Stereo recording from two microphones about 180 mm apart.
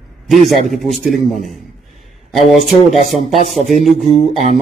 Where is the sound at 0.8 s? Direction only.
Centre (ahead or behind).